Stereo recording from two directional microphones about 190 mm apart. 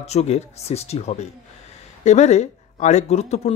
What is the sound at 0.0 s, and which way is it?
Speech, 35° left (ahead or behind).